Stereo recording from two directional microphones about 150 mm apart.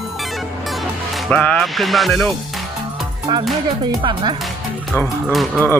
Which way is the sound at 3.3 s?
30° right (ahead or behind).